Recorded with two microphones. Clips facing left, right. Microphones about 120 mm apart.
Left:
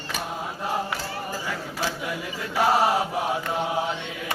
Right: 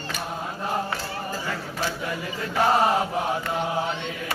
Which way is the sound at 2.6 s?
5° left (ahead or behind).